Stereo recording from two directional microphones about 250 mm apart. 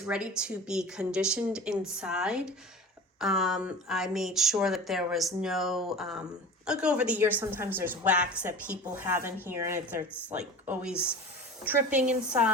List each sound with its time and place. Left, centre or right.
0.0 s a woman's voice: centre
11.6 s a woman's voice: centre